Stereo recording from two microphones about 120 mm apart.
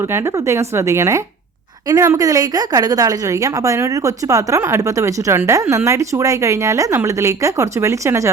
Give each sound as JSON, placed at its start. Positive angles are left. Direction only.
{"t": 0.3, "sound": "a woman's voice", "side_deg": -25}